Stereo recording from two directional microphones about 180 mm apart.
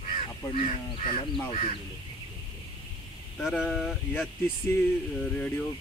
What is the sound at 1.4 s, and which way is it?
Speech, 30° left (ahead or behind).